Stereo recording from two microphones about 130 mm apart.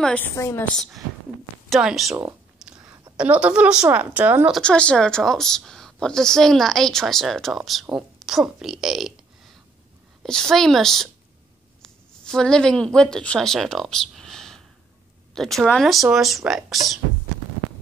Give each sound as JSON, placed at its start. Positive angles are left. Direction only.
{"t": 0.0, "sound": "a woman's voice", "side_deg": 10}
{"t": 0.4, "sound": "a woman's voice", "side_deg": 20}
{"t": 1.7, "sound": "speech", "side_deg": -5}
{"t": 2.6, "sound": "whispering", "side_deg": -5}
{"t": 3.2, "sound": "a woman's voice", "side_deg": -10}
{"t": 4.5, "sound": "speech", "side_deg": 5}
{"t": 10.2, "sound": "speech", "side_deg": 5}